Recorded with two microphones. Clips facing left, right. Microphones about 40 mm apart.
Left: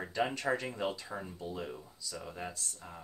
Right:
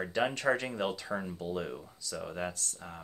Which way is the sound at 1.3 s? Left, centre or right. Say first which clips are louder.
Right 5 dB; right.